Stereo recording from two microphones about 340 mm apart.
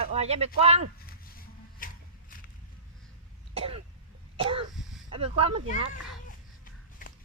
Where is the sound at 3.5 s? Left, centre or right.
Centre.